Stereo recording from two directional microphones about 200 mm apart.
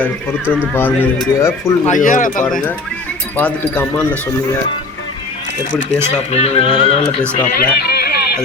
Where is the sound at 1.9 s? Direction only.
40° left (ahead or behind).